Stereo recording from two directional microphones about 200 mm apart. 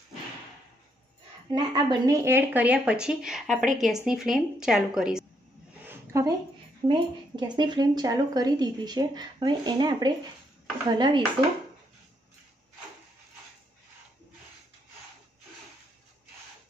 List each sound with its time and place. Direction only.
1.5 s speech: 20° right (ahead or behind); by 5.2 s 5° right (ahead or behind)
5.9 s a sound: 15° right (ahead or behind)
6.9 s speech: 20° right (ahead or behind)